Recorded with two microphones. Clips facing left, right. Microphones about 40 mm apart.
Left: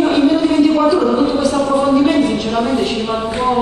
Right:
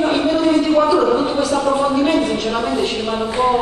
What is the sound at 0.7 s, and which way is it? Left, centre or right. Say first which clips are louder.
Speech: left 1 dB; centre.